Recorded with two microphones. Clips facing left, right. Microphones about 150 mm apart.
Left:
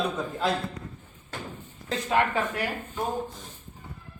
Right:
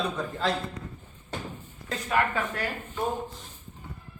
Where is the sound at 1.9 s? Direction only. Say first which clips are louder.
Left 2 dB; 25° left (ahead or behind).